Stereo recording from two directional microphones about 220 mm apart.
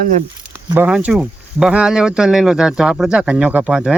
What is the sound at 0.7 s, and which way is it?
Speech, 5° right (ahead or behind).